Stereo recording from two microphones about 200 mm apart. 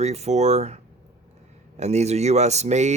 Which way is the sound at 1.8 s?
35° right (ahead or behind).